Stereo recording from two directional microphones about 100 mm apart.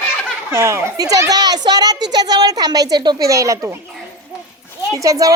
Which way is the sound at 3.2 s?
35° right (ahead or behind).